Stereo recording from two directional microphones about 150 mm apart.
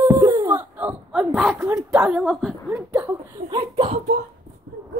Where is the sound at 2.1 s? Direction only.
Centre (ahead or behind).